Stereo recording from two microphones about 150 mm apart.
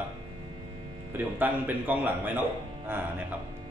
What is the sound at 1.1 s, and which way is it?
A man's voice, 10° right (ahead or behind).